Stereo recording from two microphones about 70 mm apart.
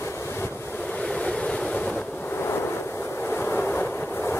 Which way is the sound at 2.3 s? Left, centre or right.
Left.